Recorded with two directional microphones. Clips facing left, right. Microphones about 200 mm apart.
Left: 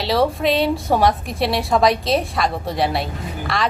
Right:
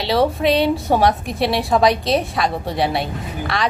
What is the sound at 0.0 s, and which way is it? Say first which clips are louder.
A woman's voice: right 1 dB; centre (ahead or behind).